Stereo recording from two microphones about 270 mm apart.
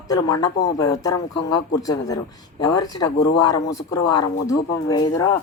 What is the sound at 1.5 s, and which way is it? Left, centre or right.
A woman's voice, centre.